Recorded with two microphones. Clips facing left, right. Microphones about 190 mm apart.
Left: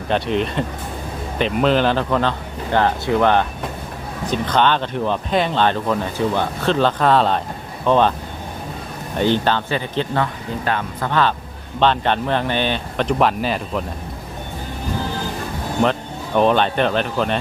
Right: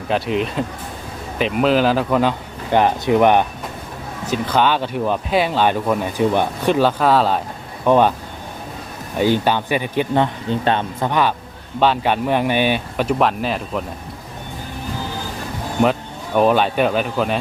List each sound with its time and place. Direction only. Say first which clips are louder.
0.1 s speech: even; 5° right (ahead or behind)
9.1 s speech: right 1 dB; 10° right (ahead or behind)
10.5 s speech: right 4 dB; 25° right (ahead or behind); by 13.8 s centre (ahead or behind)
15.8 s speech: right 2 dB; 5° right (ahead or behind)